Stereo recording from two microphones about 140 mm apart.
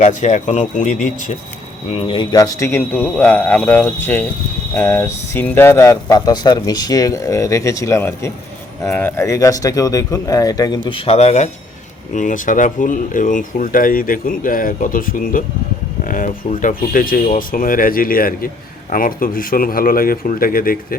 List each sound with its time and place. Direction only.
0.0 s speech: 60° left (ahead or behind)
1.9 s speech: 40° left (ahead or behind)
2.3 s speech: 25° left (ahead or behind)
10.8 s speech: 40° left (ahead or behind)
12.1 s a man's voice: 65° left (ahead or behind); by 20.7 s 90° left